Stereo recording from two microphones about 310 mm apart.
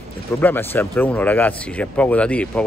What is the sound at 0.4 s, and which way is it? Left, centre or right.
Speech, centre.